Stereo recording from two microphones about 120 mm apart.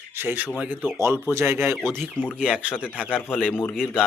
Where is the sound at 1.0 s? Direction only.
25° right (ahead or behind); by 2.7 s 5° right (ahead or behind).